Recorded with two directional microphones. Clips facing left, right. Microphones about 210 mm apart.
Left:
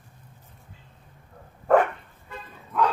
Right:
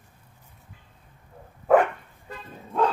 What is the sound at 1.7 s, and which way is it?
Dog, 5° right (ahead or behind).